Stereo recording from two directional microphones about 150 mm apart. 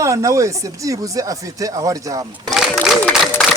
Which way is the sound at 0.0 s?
20° right (ahead or behind).